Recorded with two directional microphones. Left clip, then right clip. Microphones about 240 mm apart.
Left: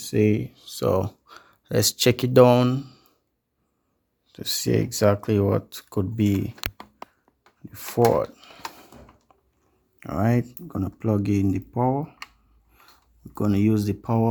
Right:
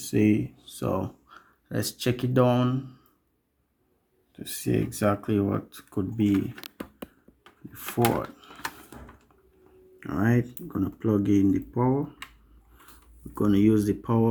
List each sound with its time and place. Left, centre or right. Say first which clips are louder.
0.0 s speech: left 2 dB; left
4.3 s speech: left 5 dB; left
7.7 s speech: left 6 dB; left
10.0 s speech: left 2 dB; left
13.3 s speech: right 1 dB; left